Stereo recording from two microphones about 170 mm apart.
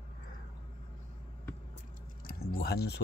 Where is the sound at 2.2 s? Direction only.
65° left (ahead or behind).